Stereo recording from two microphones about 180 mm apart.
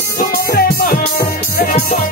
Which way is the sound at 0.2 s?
55° left (ahead or behind).